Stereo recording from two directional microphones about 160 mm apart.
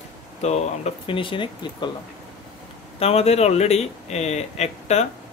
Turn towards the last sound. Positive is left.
turn(degrees=45)  # may be behind; listen again after turning